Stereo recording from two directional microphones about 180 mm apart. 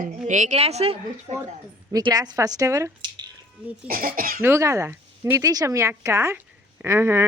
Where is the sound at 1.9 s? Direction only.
20° right (ahead or behind).